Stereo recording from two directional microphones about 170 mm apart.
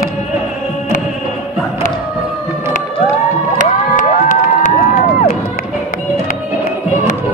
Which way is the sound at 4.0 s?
50° left (ahead or behind).